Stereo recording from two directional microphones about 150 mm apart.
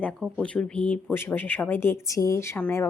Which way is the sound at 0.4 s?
5° left (ahead or behind).